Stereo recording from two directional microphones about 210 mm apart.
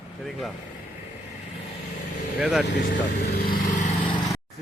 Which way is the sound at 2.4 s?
5° right (ahead or behind).